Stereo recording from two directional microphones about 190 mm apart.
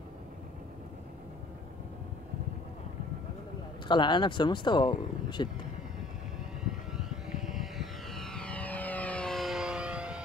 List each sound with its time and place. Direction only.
3.8 s speech: 25° left (ahead or behind)
6.9 s vehicle: centre (ahead or behind)